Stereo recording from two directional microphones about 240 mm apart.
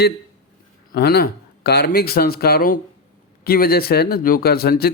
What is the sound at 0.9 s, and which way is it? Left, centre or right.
Speech, left.